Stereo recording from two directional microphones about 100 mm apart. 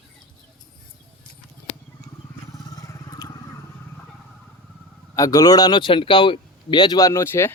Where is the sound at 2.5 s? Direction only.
35° left (ahead or behind).